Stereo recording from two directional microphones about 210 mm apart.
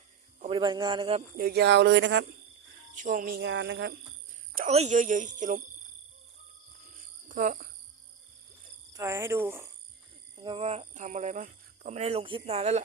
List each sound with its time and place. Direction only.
0.4 s a man's voice: 25° right (ahead or behind)
1.4 s speech: 50° right (ahead or behind)
2.9 s speech: 40° right (ahead or behind); by 3.9 s 55° right (ahead or behind)
4.5 s speech: 35° right (ahead or behind)
7.3 s cricket: 40° right (ahead or behind)
8.9 s speech: 15° right (ahead or behind)
10.3 s speech: 25° right (ahead or behind)